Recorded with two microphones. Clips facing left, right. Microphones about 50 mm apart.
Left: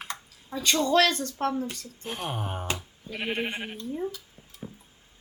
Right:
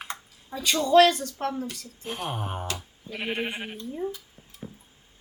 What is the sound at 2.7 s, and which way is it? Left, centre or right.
Bleat, left.